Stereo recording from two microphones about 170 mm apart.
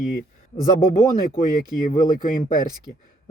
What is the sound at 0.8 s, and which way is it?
Speech, 55° left (ahead or behind).